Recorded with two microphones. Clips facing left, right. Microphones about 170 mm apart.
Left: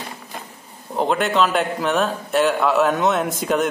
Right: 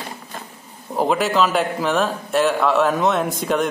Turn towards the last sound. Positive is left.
turn(degrees=0)  # may be behind; listen again after turning